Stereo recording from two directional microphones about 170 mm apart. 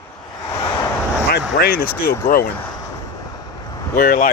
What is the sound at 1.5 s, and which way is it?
Speech, 65° left (ahead or behind).